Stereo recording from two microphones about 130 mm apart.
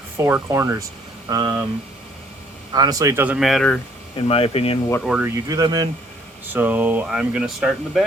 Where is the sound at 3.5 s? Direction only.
5° left (ahead or behind).